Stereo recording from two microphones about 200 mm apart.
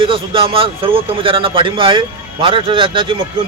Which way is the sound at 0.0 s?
25° right (ahead or behind).